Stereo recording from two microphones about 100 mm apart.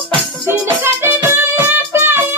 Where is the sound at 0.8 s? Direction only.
20° right (ahead or behind).